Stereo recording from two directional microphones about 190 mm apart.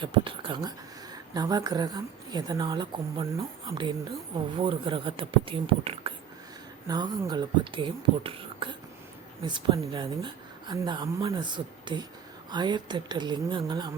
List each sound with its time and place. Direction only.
0.0 s a woman's voice: 25° right (ahead or behind)
4.4 s a woman's voice: 25° right (ahead or behind)